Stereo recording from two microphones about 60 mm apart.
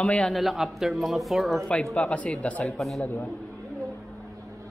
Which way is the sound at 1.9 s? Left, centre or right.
Left.